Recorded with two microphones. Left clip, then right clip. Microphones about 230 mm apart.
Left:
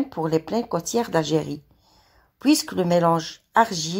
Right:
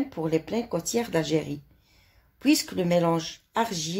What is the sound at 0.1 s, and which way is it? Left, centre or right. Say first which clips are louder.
A woman's voice: left 5 dB; left.